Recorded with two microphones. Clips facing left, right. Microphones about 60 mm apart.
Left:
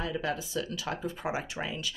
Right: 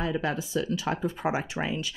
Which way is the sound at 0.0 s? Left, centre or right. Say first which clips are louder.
Right 4 dB; right.